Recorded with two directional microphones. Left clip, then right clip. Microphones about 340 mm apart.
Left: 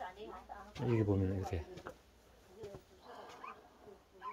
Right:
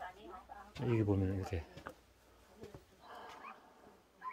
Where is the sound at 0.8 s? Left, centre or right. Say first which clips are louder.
Even; centre.